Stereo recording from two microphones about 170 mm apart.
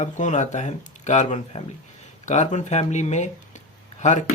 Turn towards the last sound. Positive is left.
turn(degrees=45)  # may be behind; listen again after turning